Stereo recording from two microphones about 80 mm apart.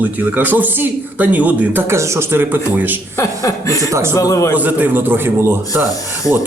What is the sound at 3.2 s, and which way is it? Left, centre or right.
Speech, left.